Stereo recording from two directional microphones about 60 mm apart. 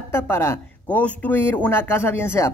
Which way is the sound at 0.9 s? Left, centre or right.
Left.